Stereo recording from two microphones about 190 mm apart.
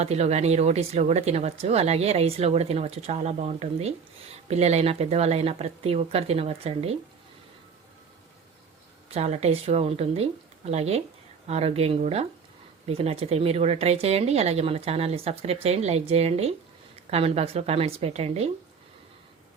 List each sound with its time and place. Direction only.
0.0 s speech: 35° right (ahead or behind)
9.0 s speech: 35° right (ahead or behind)